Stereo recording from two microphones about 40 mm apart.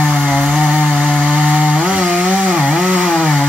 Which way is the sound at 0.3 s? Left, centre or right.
Centre.